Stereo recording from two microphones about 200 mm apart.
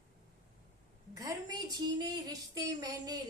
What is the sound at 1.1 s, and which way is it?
A woman's voice, 15° right (ahead or behind).